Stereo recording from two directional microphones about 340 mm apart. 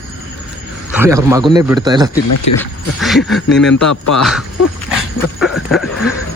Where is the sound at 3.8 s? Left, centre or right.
Left.